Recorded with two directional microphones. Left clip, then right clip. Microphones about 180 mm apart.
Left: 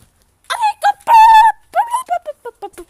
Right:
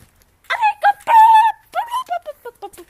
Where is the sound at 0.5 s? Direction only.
15° left (ahead or behind).